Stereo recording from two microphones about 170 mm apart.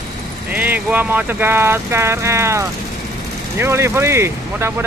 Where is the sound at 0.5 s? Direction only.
10° right (ahead or behind).